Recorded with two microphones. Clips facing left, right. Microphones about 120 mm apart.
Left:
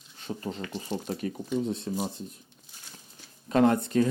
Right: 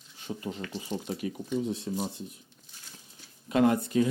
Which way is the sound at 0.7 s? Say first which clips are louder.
Left 1 dB; 40° left (ahead or behind).